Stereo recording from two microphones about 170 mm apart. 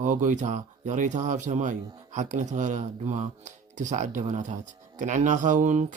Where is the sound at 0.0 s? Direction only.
50° right (ahead or behind).